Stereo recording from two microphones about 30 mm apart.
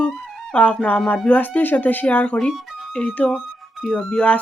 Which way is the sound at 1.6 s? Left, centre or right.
Left.